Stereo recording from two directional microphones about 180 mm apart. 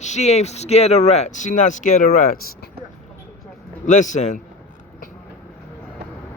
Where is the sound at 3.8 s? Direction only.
45° left (ahead or behind).